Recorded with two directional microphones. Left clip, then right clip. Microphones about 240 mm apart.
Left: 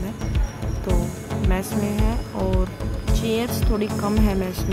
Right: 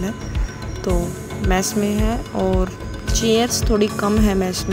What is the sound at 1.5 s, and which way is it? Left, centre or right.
Speech, centre.